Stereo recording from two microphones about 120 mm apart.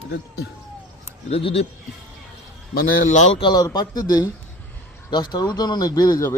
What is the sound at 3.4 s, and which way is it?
Speech, 35° left (ahead or behind).